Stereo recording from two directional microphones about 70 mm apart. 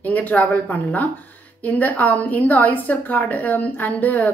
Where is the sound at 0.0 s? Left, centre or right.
Left.